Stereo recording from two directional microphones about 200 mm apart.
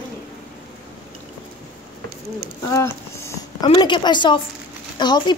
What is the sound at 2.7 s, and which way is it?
Speech, 20° left (ahead or behind).